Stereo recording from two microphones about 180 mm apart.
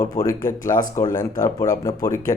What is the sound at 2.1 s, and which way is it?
Speech, 45° left (ahead or behind).